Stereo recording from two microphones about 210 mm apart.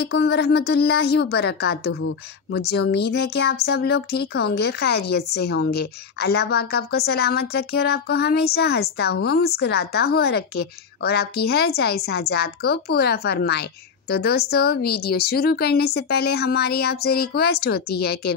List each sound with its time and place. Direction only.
0.0 s speech: 50° left (ahead or behind)